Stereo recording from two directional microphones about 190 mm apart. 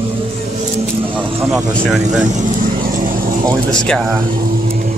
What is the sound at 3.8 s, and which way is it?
Speech, 5° left (ahead or behind).